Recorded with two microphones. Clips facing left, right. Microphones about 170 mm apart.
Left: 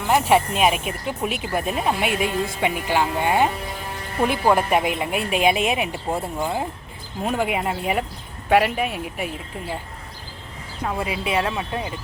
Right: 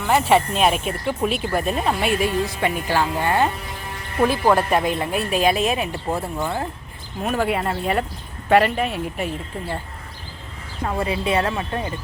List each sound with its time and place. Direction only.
0.1 s speech: 10° left (ahead or behind)
11.0 s speech: 10° left (ahead or behind)